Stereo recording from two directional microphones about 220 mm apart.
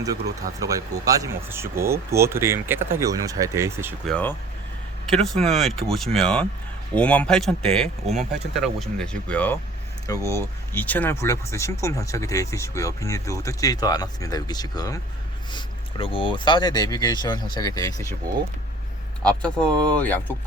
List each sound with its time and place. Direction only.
0.6 s speech: 15° right (ahead or behind)
4.1 s speech: 10° left (ahead or behind)
19.2 s speech: 5° left (ahead or behind)